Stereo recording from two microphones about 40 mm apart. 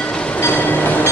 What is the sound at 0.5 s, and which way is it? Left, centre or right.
Train, left.